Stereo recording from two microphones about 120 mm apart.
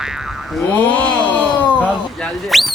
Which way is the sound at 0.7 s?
15° left (ahead or behind).